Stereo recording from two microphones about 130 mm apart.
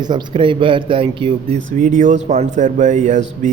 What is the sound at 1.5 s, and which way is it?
Speech, 80° right.